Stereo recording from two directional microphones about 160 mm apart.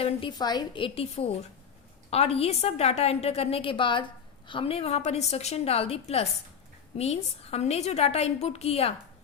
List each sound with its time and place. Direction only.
0.0 s a woman's voice: 30° left (ahead or behind)